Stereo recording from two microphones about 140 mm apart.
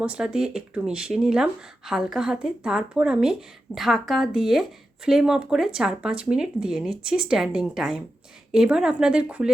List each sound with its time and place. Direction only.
0.0 s speech: 5° right (ahead or behind)